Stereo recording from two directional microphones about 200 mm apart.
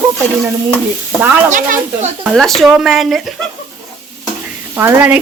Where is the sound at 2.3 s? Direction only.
Centre (ahead or behind).